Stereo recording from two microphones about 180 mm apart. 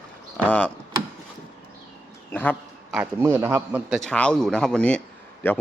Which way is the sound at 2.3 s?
10° left (ahead or behind).